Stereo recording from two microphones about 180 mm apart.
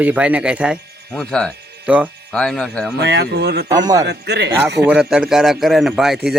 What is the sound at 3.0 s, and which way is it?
Speech, 70° right (ahead or behind).